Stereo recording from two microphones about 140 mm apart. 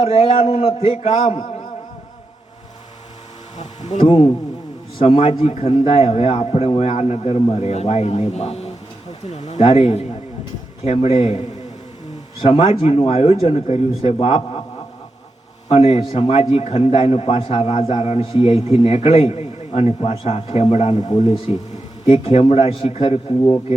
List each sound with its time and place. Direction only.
0.0 s a man's voice: 45° left (ahead or behind)
3.6 s speech: 55° left (ahead or behind)
4.0 s a man's voice: 35° left (ahead or behind)
15.7 s a man's voice: 45° left (ahead or behind)
20.9 s speech: 30° left (ahead or behind)
21.2 s a man's voice: 50° left (ahead or behind)